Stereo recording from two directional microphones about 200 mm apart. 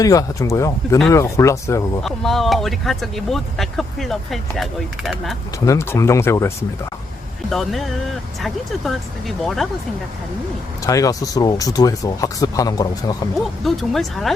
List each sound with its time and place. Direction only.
0.0 s speech: 15° left (ahead or behind)
2.0 s speech: centre (ahead or behind)
5.6 s speech: 15° left (ahead or behind)
7.5 s speech: centre (ahead or behind)
10.8 s speech: 15° left (ahead or behind)
13.7 s speech: centre (ahead or behind)